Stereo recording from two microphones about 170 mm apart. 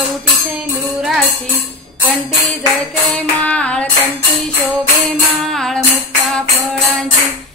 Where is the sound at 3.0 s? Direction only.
5° left (ahead or behind).